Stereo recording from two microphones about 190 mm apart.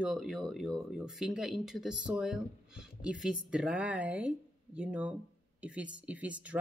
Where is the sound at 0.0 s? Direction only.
Centre (ahead or behind).